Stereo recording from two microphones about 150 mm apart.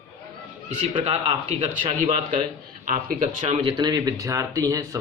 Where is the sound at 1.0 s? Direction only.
40° right (ahead or behind).